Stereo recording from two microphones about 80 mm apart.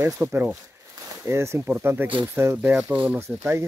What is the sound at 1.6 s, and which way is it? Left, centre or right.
Speech, centre.